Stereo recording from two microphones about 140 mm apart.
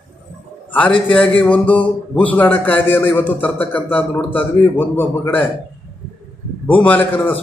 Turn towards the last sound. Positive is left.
turn(degrees=10)  # may be behind; listen again after turning